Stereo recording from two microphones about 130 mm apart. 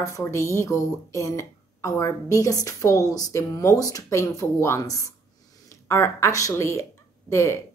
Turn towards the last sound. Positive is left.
turn(degrees=20)  # may be behind; listen again after turning